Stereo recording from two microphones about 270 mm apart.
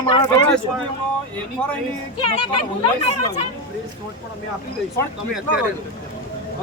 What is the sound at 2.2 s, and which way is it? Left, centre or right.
Speech, centre.